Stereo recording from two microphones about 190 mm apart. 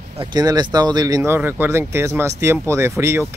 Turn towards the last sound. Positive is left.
turn(degrees=-15)  # may be behind; listen again after turning